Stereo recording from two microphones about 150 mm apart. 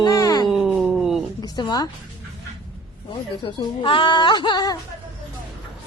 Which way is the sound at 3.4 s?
35° left (ahead or behind).